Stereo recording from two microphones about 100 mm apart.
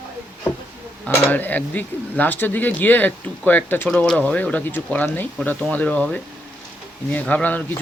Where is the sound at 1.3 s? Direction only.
20° left (ahead or behind).